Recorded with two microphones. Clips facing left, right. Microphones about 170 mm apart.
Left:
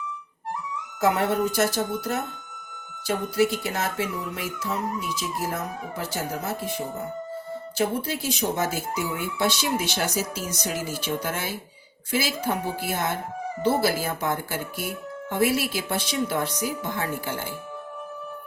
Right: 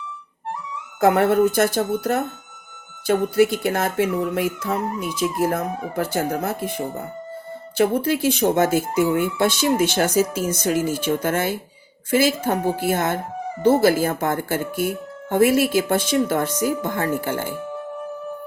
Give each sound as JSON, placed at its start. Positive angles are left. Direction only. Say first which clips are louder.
{"t": 1.0, "sound": "speech", "louder": "right 7 dB", "side_deg": -55}